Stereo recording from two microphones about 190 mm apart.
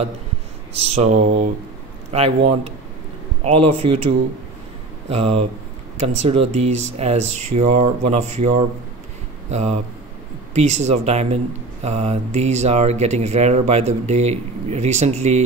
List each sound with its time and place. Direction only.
0.7 s speech: 35° right (ahead or behind)
5.1 s speech: 35° right (ahead or behind)